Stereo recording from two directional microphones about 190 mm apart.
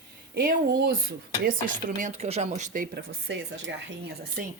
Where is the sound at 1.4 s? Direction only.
45° right (ahead or behind).